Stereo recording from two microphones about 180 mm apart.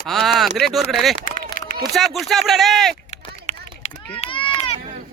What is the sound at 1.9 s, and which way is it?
Speech, centre (ahead or behind).